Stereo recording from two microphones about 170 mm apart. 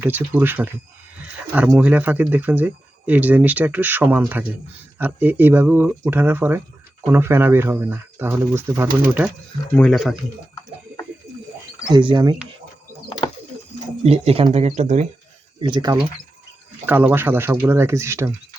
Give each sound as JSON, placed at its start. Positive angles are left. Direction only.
{"t": 0.0, "sound": "speech", "side_deg": -10}
{"t": 1.7, "sound": "speech", "side_deg": -10}
{"t": 9.7, "sound": "speech", "side_deg": 5}
{"t": 11.9, "sound": "speech", "side_deg": -25}
{"t": 14.0, "sound": "speech", "side_deg": -35}
{"t": 15.6, "sound": "speech", "side_deg": -25}
{"t": 16.8, "sound": "speech", "side_deg": -10}